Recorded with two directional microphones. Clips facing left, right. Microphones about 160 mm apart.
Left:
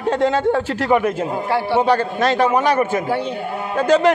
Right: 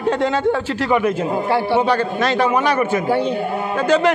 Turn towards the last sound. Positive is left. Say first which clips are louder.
# left 1 dB
turn(degrees=40)  # may be behind; listen again after turning